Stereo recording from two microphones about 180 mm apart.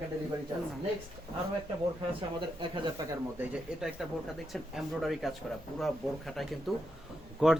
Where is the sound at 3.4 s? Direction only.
5° right (ahead or behind).